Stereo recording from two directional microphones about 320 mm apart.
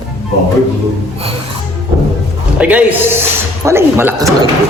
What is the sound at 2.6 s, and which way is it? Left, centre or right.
A man's voice, centre.